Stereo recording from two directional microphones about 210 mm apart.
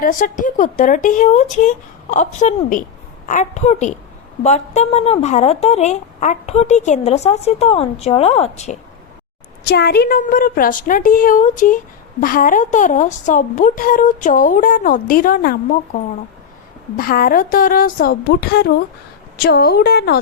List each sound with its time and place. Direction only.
0.0 s a woman's voice: 40° left (ahead or behind)
9.6 s a woman's voice: 50° left (ahead or behind)
17.0 s speech: 45° left (ahead or behind)